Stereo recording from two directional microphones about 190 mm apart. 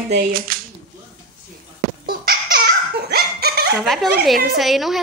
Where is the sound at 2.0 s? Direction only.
55° right (ahead or behind).